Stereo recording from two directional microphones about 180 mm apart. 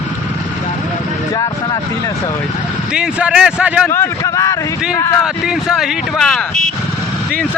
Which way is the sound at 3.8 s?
15° left (ahead or behind).